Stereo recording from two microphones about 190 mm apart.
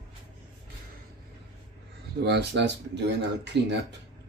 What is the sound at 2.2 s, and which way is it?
Speech, 60° right (ahead or behind).